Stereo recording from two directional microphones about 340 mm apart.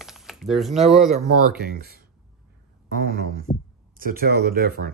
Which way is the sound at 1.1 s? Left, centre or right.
Right.